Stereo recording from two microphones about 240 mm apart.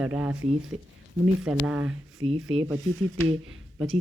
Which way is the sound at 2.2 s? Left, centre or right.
Right.